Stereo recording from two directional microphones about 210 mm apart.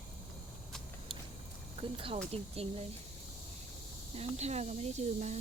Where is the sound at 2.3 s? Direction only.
30° right (ahead or behind).